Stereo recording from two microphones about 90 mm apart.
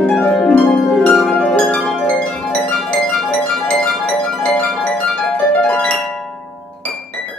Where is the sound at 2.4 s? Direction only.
10° left (ahead or behind).